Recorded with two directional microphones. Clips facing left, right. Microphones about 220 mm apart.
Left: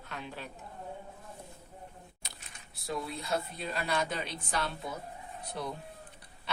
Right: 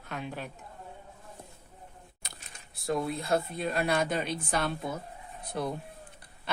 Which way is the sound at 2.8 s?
50° right (ahead or behind).